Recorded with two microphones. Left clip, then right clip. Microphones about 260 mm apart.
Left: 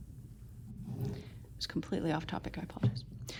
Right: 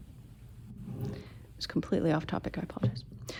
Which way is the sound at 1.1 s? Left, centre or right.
Right.